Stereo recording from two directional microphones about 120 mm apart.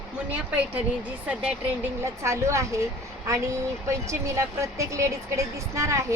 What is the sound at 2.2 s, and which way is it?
Speech, 25° right (ahead or behind).